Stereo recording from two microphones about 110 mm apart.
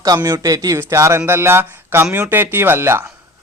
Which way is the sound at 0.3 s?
35° right (ahead or behind).